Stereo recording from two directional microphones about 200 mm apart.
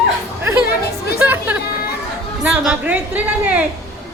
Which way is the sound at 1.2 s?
10° right (ahead or behind).